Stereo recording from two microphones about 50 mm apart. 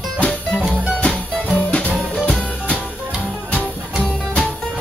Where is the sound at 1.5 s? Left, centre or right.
Left.